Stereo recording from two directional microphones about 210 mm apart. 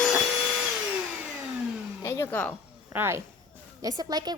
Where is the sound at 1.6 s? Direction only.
5° right (ahead or behind).